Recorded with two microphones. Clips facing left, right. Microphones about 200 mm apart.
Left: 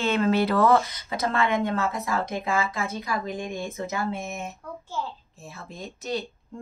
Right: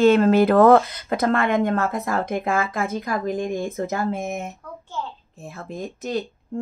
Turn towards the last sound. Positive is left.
turn(degrees=-50)  # may be behind; listen again after turning